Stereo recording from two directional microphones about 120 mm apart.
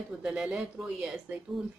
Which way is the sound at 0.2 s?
5° right (ahead or behind).